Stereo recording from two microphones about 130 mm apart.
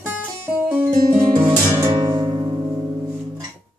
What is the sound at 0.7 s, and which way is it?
Music, 15° right (ahead or behind).